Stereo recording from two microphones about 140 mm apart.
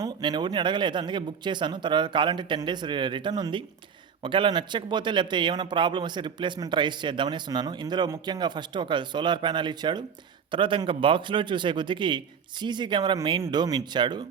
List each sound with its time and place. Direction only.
0.0 s a man's voice: 30° right (ahead or behind)